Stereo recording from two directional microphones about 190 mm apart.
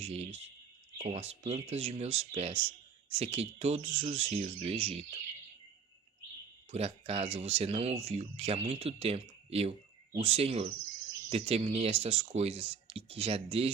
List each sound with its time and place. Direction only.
0.0 s speech: 35° right (ahead or behind)
6.7 s speech: 35° right (ahead or behind)